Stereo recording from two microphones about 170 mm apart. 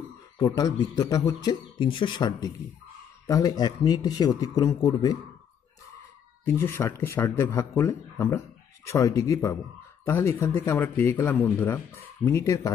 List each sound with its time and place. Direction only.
0.4 s a man's voice: 25° left (ahead or behind)
6.4 s a man's voice: 15° left (ahead or behind)